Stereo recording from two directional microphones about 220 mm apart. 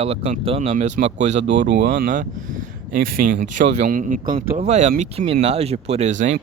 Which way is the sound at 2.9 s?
40° right (ahead or behind).